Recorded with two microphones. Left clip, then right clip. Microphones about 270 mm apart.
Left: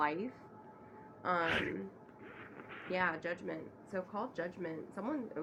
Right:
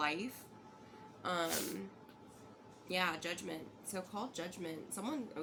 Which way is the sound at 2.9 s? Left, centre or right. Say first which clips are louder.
Left 1 dB; centre.